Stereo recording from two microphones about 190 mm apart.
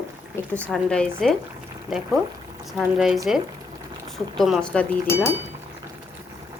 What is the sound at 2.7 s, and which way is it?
Speech, centre (ahead or behind).